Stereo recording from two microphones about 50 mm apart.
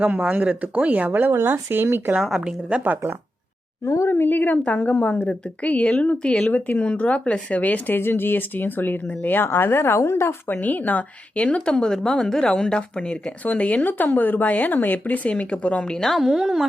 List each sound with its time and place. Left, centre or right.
0.2 s speech: right
1.5 s speech: right
2.4 s speech: right
3.8 s a woman's voice: left
4.1 s a woman's voice: left
4.5 s a woman's voice: left
7.9 s speech: left
10.6 s a woman's voice: left
15.9 s a woman's voice: centre
16.1 s speech: centre